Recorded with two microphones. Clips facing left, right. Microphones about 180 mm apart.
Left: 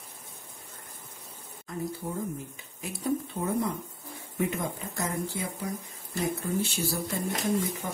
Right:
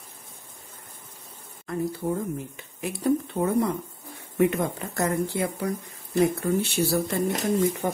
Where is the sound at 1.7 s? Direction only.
65° right (ahead or behind).